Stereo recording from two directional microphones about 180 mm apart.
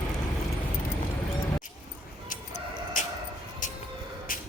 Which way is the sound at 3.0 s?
45° left (ahead or behind).